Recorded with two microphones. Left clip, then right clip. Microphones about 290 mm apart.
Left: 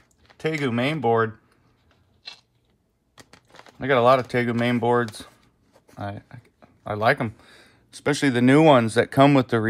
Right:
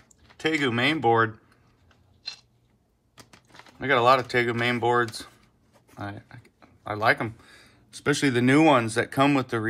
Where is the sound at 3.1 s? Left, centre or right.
Left.